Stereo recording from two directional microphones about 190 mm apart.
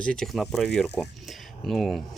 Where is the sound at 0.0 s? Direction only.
5° left (ahead or behind).